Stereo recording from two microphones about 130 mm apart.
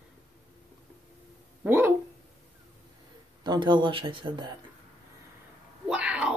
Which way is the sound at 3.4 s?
35° right (ahead or behind).